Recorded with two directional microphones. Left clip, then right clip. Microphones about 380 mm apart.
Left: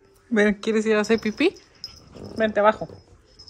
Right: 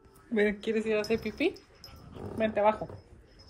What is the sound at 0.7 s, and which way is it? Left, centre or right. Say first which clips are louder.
Speech: left 8 dB; left.